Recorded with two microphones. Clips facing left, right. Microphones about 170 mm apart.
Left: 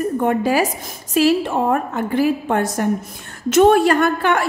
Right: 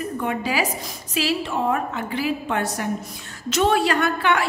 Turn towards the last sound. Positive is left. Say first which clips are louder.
# left 4 dB
turn(degrees=45)  # may be behind; listen again after turning